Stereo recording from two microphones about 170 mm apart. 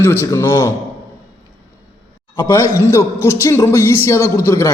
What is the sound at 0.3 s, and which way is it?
Speech, 15° left (ahead or behind).